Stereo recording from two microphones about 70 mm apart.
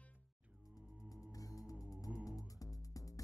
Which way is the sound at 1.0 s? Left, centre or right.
Left.